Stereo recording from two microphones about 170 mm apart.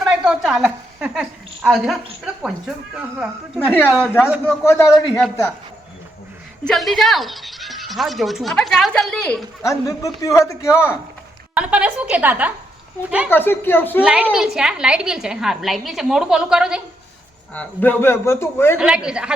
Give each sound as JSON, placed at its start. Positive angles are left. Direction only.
{"t": 0.0, "sound": "a woman's voice", "side_deg": 0}
{"t": 4.4, "sound": "a man's voice", "side_deg": 15}
{"t": 6.7, "sound": "a woman's voice", "side_deg": 0}
{"t": 9.6, "sound": "a man's voice", "side_deg": 20}
{"t": 11.5, "sound": "a woman's voice", "side_deg": -5}
{"t": 13.3, "sound": "a man's voice", "side_deg": 10}
{"t": 14.0, "sound": "a woman's voice", "side_deg": -5}
{"t": 17.5, "sound": "a man's voice", "side_deg": 10}
{"t": 18.8, "sound": "a woman's voice", "side_deg": -5}